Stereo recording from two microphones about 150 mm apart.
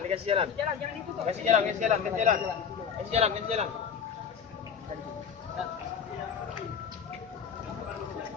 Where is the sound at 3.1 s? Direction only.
45° right (ahead or behind).